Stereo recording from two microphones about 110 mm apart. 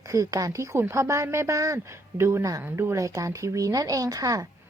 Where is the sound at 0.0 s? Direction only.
30° right (ahead or behind).